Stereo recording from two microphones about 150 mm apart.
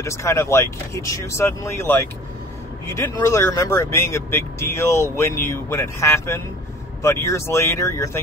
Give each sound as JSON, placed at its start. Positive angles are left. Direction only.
{"t": 0.0, "sound": "speech", "side_deg": 20}